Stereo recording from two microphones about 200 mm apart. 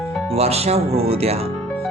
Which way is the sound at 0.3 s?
30° right (ahead or behind).